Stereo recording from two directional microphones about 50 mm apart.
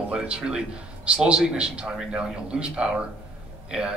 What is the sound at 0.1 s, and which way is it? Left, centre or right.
A man's voice, right.